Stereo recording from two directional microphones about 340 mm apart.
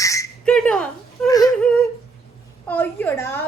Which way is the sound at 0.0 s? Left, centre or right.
Centre.